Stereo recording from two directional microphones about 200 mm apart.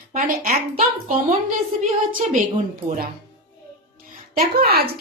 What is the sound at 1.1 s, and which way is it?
Speech, 40° right (ahead or behind).